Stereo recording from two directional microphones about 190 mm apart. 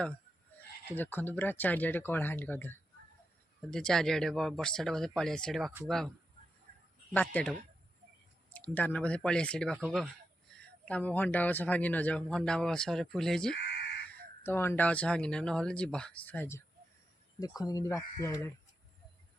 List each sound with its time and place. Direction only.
0.9 s a man's voice: 10° left (ahead or behind)
6.7 s a sound: 55° right (ahead or behind)
7.1 s speech: 10° left (ahead or behind)
8.5 s speech: 10° left (ahead or behind)
10.8 s a man's voice: 10° left (ahead or behind)